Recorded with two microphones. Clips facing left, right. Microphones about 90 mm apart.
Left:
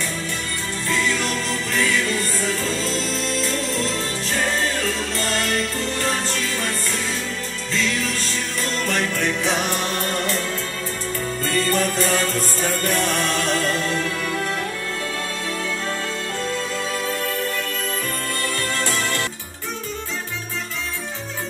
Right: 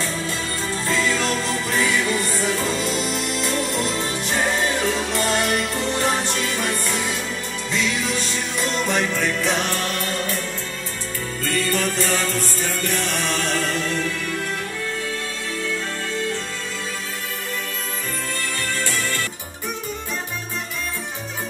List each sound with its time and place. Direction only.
0.8 s music: 20° right (ahead or behind); by 9.7 s 5° left (ahead or behind)
10.1 s music: 75° left (ahead or behind)
11.4 s music: 35° left (ahead or behind)